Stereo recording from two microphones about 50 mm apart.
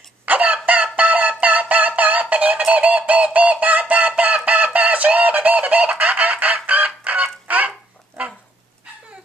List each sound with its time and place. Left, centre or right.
0.2 s chicken: right
0.9 s music: right
7.4 s a sound: right